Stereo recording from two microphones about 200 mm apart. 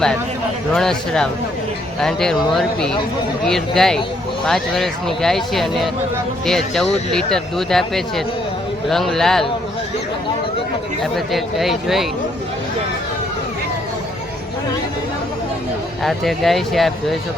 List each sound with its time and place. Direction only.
0.7 s speech: centre (ahead or behind)
11.0 s speech: centre (ahead or behind)
16.0 s speech: centre (ahead or behind)